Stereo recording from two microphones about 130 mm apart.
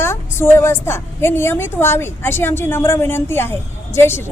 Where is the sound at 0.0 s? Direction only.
20° left (ahead or behind).